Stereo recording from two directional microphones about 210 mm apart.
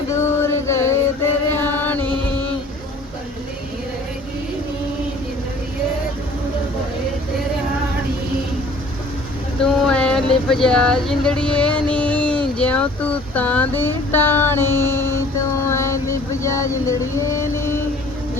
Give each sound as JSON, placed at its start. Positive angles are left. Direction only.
{"t": 0.1, "sound": "music", "side_deg": 15}
{"t": 1.5, "sound": "chant", "side_deg": 10}
{"t": 9.6, "sound": "speech", "side_deg": 5}
{"t": 15.6, "sound": "a sound", "side_deg": 15}